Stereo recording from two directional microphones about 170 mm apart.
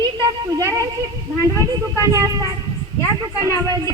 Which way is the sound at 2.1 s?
20° right (ahead or behind).